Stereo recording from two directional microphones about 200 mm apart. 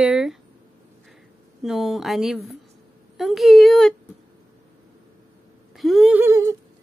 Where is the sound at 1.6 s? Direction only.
Centre (ahead or behind).